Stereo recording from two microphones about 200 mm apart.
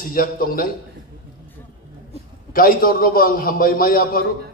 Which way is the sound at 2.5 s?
45° left (ahead or behind).